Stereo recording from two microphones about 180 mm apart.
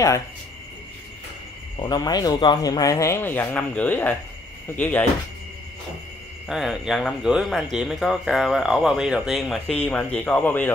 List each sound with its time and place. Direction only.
1.8 s speech: 20° left (ahead or behind)
6.4 s speech: centre (ahead or behind)